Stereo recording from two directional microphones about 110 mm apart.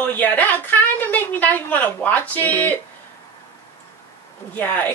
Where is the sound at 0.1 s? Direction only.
15° left (ahead or behind).